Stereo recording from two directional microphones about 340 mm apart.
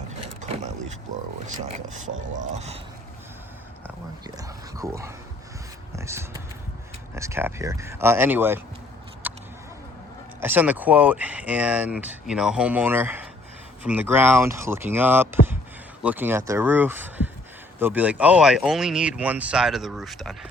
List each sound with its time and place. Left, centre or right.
0.4 s vehicle: centre
1.6 s speech: right
4.4 s speech: centre
9.2 s a sound: centre
10.4 s speech: centre